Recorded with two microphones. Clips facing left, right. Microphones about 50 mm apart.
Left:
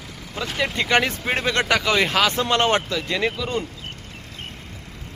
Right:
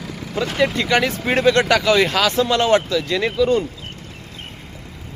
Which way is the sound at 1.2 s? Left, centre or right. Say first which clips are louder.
Right 5 dB; centre.